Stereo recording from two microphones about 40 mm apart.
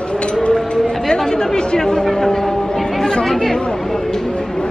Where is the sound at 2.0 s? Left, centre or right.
Centre.